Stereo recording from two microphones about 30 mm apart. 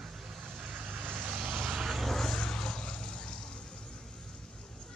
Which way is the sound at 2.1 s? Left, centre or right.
Centre.